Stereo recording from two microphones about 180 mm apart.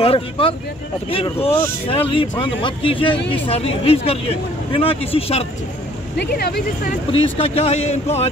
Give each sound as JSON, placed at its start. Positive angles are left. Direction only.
{"t": 0.0, "sound": "speech", "side_deg": 30}
{"t": 6.1, "sound": "speech", "side_deg": 65}
{"t": 7.1, "sound": "speech", "side_deg": 30}